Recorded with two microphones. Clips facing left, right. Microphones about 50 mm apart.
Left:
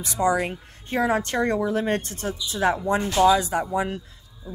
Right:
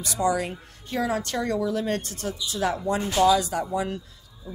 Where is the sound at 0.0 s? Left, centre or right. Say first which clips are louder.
Left 2 dB; left.